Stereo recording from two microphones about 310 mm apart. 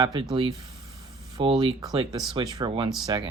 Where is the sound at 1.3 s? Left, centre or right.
Centre.